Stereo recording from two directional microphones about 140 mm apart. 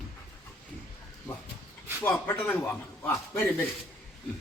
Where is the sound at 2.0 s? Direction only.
10° left (ahead or behind).